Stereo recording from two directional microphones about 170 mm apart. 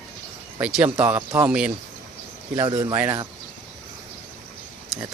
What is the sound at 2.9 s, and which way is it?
Speech, 10° right (ahead or behind).